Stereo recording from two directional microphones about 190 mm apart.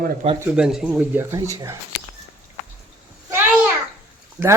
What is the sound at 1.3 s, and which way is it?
Speech, 15° right (ahead or behind).